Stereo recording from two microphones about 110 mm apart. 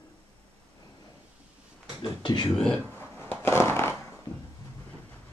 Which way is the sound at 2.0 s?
45° left (ahead or behind).